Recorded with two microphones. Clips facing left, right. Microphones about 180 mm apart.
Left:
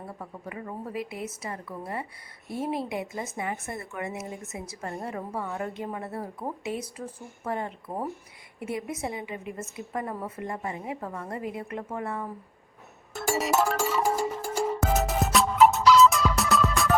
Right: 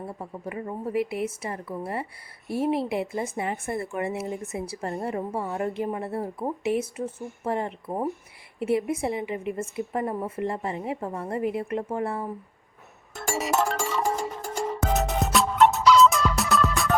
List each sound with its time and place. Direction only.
0.2 s a woman's voice: 30° right (ahead or behind)
13.2 s music: centre (ahead or behind)